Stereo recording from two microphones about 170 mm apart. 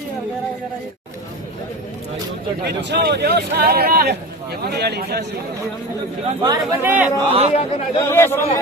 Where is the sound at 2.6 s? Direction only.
80° right.